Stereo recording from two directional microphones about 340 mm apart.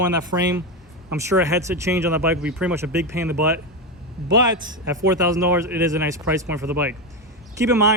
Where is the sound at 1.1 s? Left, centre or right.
Centre.